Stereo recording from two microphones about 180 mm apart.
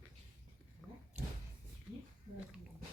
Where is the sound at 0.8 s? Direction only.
Centre (ahead or behind).